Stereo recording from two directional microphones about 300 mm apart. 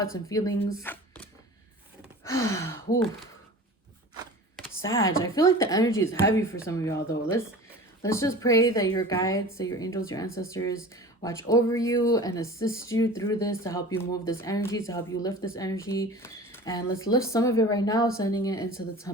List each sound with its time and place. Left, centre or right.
0.0 s speech: centre
4.8 s speech: left
5.2 s speech: centre